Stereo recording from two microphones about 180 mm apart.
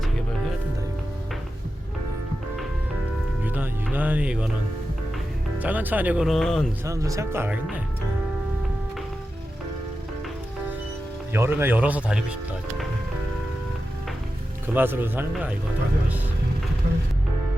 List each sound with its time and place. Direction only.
3.4 s music: 10° right (ahead or behind)
3.9 s speech: 10° right (ahead or behind)
5.5 s speech: 10° right (ahead or behind)
6.8 s speech: 15° right (ahead or behind)
11.3 s speech: 15° right (ahead or behind)
14.7 s speech: 10° right (ahead or behind)